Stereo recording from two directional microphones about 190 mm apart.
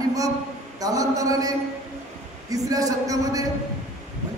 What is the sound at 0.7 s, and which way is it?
Speech, 20° right (ahead or behind).